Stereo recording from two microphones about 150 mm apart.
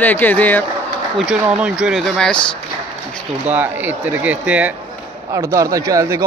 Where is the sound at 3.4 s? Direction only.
10° right (ahead or behind).